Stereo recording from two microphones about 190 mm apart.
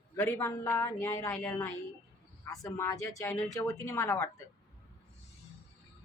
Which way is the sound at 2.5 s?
15° left (ahead or behind).